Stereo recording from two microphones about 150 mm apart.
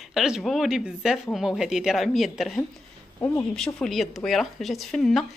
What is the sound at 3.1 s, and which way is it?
Speech, 20° left (ahead or behind).